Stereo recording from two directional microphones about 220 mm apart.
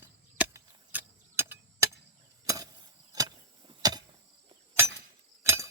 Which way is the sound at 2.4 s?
15° right (ahead or behind).